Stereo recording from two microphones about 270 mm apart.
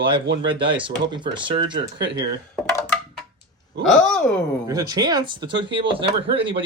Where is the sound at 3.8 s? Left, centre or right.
Centre.